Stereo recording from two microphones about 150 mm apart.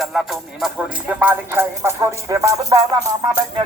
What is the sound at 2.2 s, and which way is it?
Music, 20° right (ahead or behind).